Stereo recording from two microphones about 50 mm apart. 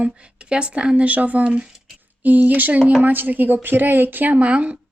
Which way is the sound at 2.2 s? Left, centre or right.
Right.